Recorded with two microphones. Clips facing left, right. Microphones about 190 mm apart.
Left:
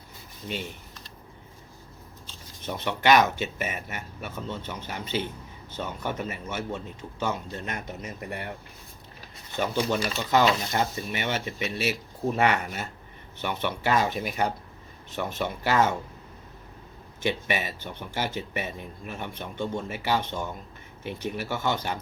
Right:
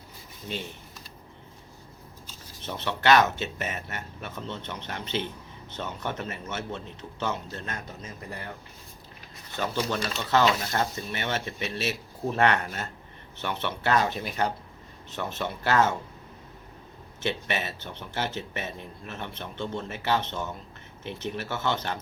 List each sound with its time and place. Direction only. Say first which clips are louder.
2.6 s speech: left 1 dB; 15° left (ahead or behind)
9.6 s speech: left 3 dB; 15° left (ahead or behind)
17.2 s speech: left 2 dB; 10° left (ahead or behind)